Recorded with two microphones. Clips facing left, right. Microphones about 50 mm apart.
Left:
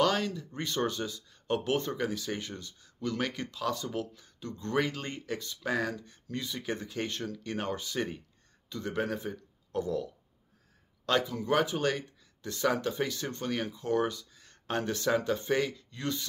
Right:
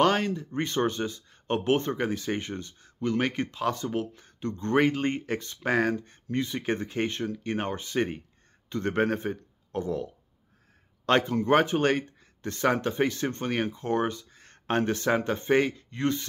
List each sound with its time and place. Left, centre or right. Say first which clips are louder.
0.0 s speech: right 4 dB; right
11.1 s speech: right 6 dB; right